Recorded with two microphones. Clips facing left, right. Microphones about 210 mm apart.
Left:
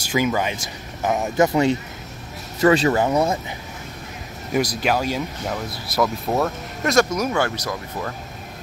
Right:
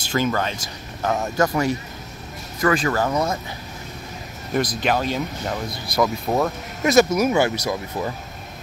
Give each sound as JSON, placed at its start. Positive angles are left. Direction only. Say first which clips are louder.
{"t": 0.1, "sound": "speech", "louder": "left 1 dB", "side_deg": 10}
{"t": 4.7, "sound": "speech", "louder": "even", "side_deg": 5}